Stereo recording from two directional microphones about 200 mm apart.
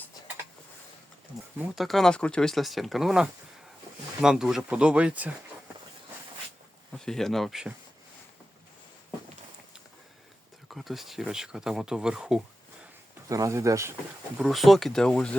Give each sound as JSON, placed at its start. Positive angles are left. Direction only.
{"t": 1.5, "sound": "speech", "side_deg": 0}
{"t": 6.9, "sound": "speech", "side_deg": 5}
{"t": 10.7, "sound": "speech", "side_deg": 0}
{"t": 13.2, "sound": "speech", "side_deg": -15}
{"t": 14.3, "sound": "speech", "side_deg": 0}